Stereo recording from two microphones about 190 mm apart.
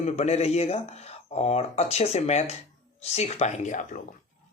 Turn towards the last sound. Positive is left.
turn(degrees=40)  # may be behind; listen again after turning